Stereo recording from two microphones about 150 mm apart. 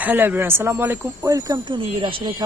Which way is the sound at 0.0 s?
10° right (ahead or behind).